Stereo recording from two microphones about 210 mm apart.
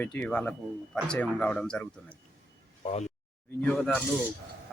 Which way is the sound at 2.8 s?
30° left (ahead or behind).